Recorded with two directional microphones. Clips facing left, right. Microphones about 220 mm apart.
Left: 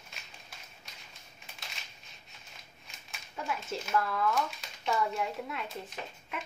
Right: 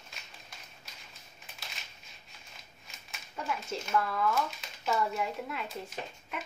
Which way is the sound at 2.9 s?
Centre (ahead or behind).